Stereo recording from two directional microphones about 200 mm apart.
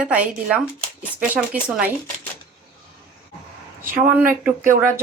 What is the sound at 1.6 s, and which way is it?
Speech, 5° right (ahead or behind).